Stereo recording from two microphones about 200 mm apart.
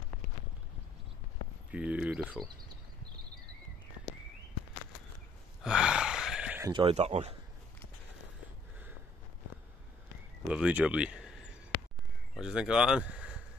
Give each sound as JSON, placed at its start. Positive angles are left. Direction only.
{"t": 1.7, "sound": "speech", "side_deg": -5}
{"t": 5.6, "sound": "gasp", "side_deg": -5}
{"t": 6.7, "sound": "speech", "side_deg": -30}
{"t": 10.5, "sound": "speech", "side_deg": -5}
{"t": 11.7, "sound": "a sound", "side_deg": 50}
{"t": 12.4, "sound": "speech", "side_deg": -5}